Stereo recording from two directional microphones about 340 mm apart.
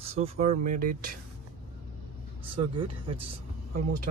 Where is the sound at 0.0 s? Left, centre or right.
Centre.